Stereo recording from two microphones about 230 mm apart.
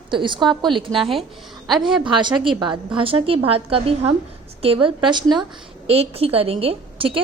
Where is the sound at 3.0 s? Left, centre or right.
Right.